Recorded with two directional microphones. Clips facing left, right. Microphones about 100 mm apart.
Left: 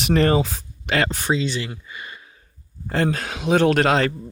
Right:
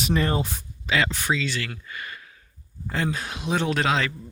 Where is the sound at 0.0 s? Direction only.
70° left (ahead or behind); by 0.9 s 90° left.